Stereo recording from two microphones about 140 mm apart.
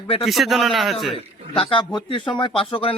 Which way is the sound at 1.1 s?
40° left (ahead or behind).